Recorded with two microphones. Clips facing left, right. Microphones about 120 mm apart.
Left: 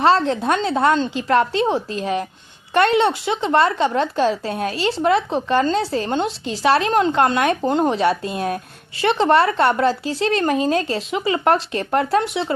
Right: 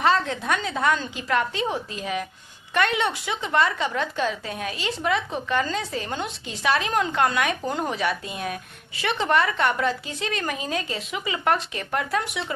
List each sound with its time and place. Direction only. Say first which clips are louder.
0.0 s speech: left 6 dB; 30° left (ahead or behind)